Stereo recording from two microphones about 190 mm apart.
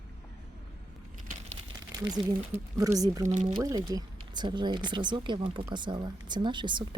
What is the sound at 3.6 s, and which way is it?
Speech, 20° right (ahead or behind).